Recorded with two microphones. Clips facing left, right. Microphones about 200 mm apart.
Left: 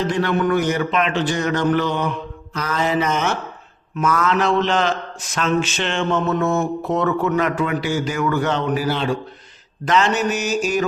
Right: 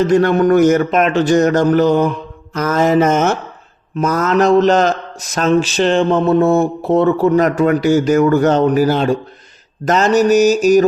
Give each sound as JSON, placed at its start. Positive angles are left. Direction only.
{"t": 0.0, "sound": "speech", "side_deg": -45}